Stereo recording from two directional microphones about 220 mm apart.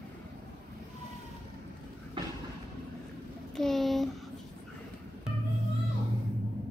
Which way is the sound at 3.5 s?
Centre (ahead or behind).